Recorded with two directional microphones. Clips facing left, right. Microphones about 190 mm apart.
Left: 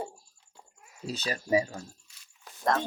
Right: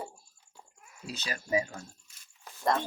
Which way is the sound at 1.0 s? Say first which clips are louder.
Left 5 dB; 30° left (ahead or behind).